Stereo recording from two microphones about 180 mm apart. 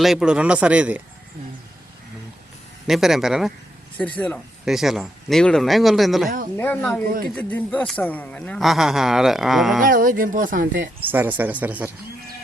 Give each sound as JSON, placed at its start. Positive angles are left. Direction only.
{"t": 0.0, "sound": "speech", "side_deg": -5}
{"t": 2.8, "sound": "a man's voice", "side_deg": 0}
{"t": 9.8, "sound": "speech", "side_deg": -50}
{"t": 11.1, "sound": "speech", "side_deg": -10}